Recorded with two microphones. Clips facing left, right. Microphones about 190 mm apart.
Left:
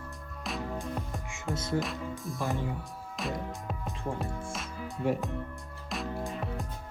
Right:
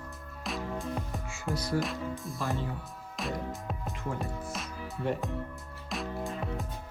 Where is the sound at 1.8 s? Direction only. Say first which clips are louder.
Right 1 dB; centre (ahead or behind).